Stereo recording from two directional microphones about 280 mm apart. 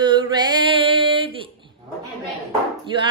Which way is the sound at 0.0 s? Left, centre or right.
Centre.